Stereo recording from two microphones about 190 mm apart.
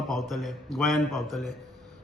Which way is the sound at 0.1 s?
Centre (ahead or behind).